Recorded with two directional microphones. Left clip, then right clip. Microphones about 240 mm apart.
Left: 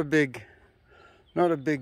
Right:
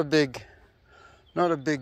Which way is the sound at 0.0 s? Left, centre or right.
Centre.